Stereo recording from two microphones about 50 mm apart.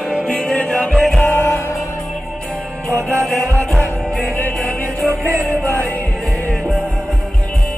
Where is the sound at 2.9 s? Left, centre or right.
Right.